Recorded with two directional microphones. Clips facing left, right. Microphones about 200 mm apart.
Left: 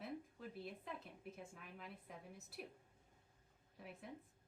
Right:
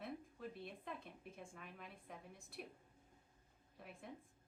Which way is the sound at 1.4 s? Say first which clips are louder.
Even; centre (ahead or behind).